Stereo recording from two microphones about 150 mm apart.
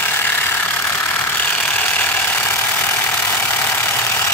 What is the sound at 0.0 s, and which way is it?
Ratchet, 15° left (ahead or behind).